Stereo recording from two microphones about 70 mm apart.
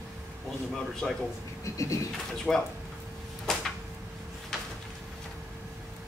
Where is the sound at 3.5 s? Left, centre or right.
Centre.